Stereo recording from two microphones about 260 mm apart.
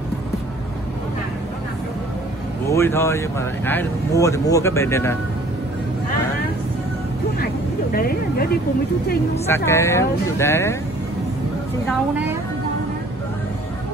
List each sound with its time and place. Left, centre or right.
2.7 s speech: centre
7.9 s speech: left
9.7 s speech: centre